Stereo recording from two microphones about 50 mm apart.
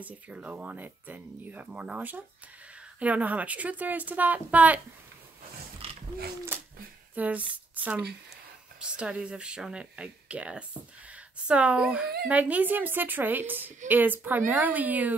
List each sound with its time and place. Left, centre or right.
0.0 s speech: right
7.2 s speech: right
8.7 s a woman's voice: centre
12.3 s speech: right